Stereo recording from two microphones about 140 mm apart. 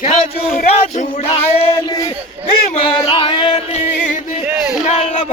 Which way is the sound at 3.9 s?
70° left (ahead or behind).